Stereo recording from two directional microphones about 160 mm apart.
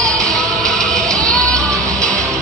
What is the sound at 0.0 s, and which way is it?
Music, 5° left (ahead or behind).